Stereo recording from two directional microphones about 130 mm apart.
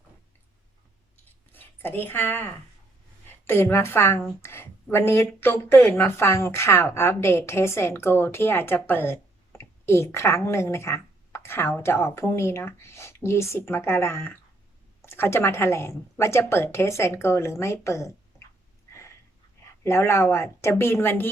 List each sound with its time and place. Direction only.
1.5 s a woman's voice: 15° left (ahead or behind)
19.8 s speech: 20° left (ahead or behind)